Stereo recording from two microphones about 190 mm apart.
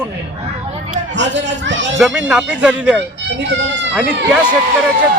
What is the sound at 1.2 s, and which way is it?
Speech, 75° right (ahead or behind).